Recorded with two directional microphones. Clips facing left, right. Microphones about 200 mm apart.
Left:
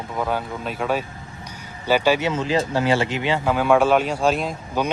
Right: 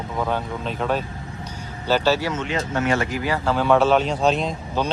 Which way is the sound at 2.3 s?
30° left (ahead or behind).